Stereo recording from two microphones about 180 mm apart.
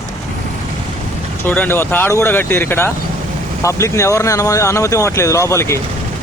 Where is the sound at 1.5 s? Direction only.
10° left (ahead or behind).